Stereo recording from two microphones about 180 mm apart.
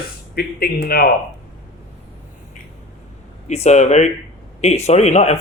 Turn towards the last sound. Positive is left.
turn(degrees=40)  # may be behind; listen again after turning